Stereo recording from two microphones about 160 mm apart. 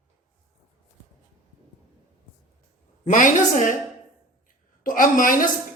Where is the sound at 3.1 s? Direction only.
55° left (ahead or behind).